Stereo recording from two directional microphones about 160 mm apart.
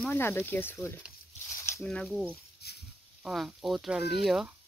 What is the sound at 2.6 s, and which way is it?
Dog, 80° left.